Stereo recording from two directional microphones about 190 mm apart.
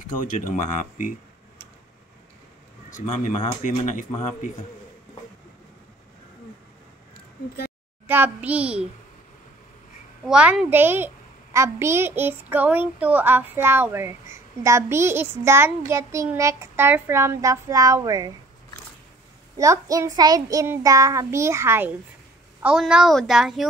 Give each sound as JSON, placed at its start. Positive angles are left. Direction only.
{"t": 0.2, "sound": "speech", "side_deg": 45}
{"t": 2.9, "sound": "speech", "side_deg": 40}
{"t": 8.1, "sound": "a child's voice", "side_deg": -10}
{"t": 10.2, "sound": "a child's voice", "side_deg": -5}
{"t": 19.5, "sound": "a child's voice", "side_deg": -15}